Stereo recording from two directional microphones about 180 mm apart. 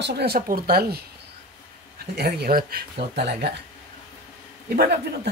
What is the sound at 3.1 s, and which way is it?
Speech, 65° right (ahead or behind).